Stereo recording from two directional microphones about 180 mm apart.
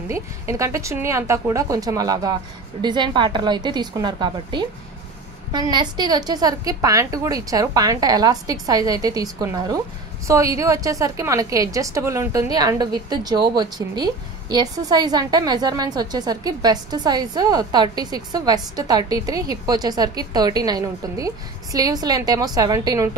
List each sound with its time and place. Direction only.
0.1 s a woman's voice: 15° right (ahead or behind)